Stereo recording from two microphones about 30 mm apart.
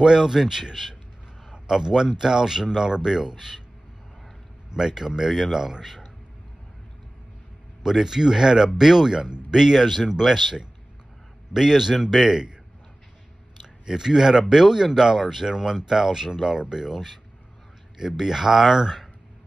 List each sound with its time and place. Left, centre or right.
0.0 s a man's voice: centre
4.6 s a man's voice: right
7.8 s speech: centre
13.9 s speech: centre